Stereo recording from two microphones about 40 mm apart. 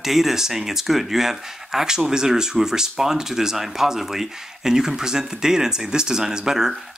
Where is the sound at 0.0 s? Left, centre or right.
Centre.